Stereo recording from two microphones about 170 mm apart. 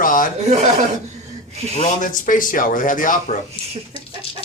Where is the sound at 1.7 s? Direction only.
45° left (ahead or behind).